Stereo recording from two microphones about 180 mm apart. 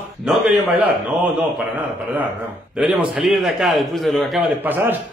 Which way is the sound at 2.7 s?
5° right (ahead or behind).